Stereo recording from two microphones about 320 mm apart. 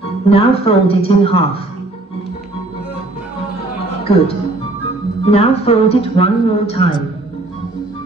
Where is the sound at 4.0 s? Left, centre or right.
Centre.